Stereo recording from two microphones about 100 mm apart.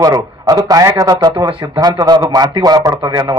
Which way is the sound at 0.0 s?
40° right (ahead or behind).